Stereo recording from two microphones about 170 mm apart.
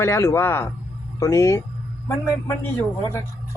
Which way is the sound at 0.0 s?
15° left (ahead or behind).